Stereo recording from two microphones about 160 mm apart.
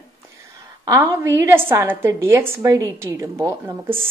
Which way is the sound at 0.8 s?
20° right (ahead or behind).